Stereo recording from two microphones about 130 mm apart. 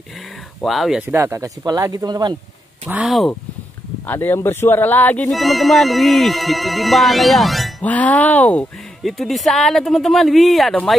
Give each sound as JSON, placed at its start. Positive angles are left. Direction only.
{"t": 0.6, "sound": "speech", "side_deg": 0}
{"t": 1.0, "sound": "speech", "side_deg": -20}
{"t": 3.0, "sound": "speech", "side_deg": 0}
{"t": 4.1, "sound": "speech", "side_deg": 15}
{"t": 5.3, "sound": "speech", "side_deg": 0}
{"t": 7.8, "sound": "speech", "side_deg": 10}